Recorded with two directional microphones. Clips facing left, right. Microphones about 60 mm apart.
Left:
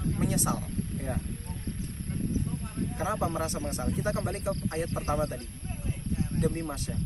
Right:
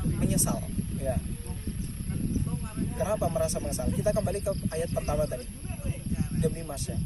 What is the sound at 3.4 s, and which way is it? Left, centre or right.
Speech, left.